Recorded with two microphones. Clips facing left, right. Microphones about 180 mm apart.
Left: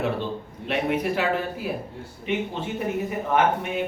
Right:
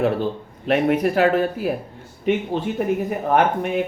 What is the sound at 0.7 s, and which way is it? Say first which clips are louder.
Speech: right 6 dB; 50° right (ahead or behind).